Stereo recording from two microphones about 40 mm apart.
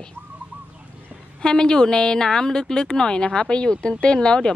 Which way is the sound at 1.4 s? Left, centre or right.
Left.